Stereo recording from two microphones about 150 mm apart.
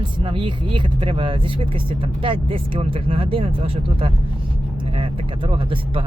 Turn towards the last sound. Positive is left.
turn(degrees=-35)  # may be behind; listen again after turning